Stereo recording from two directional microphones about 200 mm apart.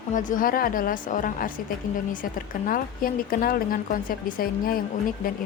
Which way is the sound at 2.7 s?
45° left (ahead or behind).